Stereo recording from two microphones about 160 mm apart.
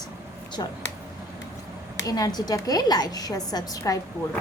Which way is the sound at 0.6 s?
25° left (ahead or behind).